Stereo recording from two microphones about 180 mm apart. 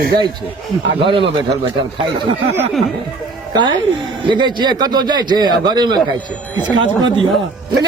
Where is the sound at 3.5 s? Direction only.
25° right (ahead or behind).